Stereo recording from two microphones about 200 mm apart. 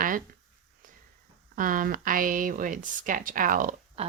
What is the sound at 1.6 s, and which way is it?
Speech, 45° right (ahead or behind).